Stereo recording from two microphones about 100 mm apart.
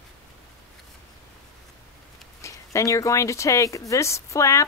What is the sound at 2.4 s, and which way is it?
Speech, 30° left (ahead or behind).